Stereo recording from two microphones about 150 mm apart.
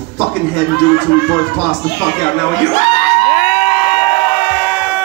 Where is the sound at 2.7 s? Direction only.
40° left (ahead or behind).